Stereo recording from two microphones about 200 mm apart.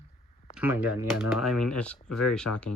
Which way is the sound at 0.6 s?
10° right (ahead or behind).